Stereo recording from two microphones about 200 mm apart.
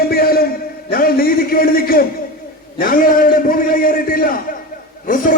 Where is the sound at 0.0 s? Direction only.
50° left (ahead or behind).